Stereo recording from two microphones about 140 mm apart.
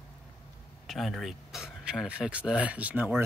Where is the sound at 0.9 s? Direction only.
Centre (ahead or behind).